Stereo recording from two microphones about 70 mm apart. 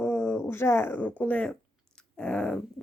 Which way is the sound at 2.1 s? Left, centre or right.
Centre.